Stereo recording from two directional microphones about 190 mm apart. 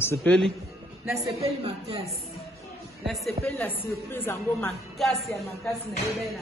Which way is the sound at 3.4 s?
10° left (ahead or behind).